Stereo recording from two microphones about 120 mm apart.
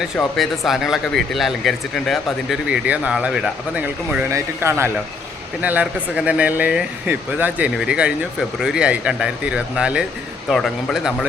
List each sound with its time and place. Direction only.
0.2 s speech: centre (ahead or behind)
4.3 s speech: 20° right (ahead or behind)
5.6 s speech: 10° right (ahead or behind)